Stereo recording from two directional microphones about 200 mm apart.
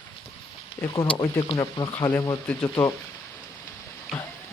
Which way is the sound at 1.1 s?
25° left (ahead or behind).